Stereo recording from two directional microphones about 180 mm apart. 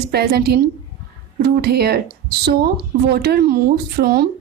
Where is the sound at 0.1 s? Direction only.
60° right (ahead or behind).